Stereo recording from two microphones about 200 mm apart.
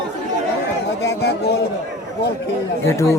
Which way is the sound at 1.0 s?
55° left (ahead or behind).